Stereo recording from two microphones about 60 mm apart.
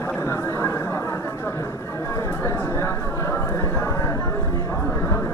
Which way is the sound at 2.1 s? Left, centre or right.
Left.